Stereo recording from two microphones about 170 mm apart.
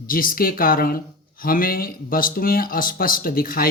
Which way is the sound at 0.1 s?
55° left (ahead or behind).